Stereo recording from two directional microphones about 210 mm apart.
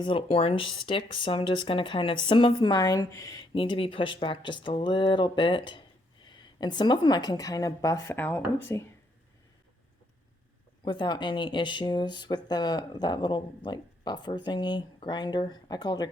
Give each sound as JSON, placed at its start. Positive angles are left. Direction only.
{"t": 0.0, "sound": "a woman's voice", "side_deg": 25}
{"t": 10.8, "sound": "speech", "side_deg": 20}